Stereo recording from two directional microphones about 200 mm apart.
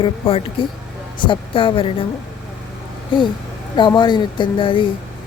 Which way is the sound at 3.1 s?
25° left (ahead or behind).